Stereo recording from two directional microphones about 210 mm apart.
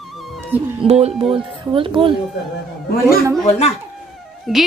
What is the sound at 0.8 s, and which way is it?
Speech, 30° right (ahead or behind).